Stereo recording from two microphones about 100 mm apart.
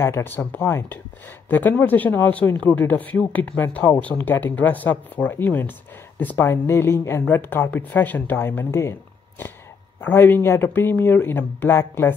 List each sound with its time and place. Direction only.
0.0 s speech: 25° left (ahead or behind)
9.9 s speech: 20° left (ahead or behind)